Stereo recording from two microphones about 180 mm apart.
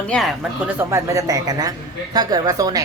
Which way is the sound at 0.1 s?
Centre (ahead or behind).